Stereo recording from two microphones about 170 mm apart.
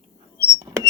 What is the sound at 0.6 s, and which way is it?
Rodents, 20° right (ahead or behind).